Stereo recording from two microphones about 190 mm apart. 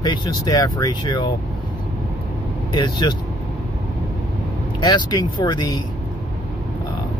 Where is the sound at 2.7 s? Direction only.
25° left (ahead or behind).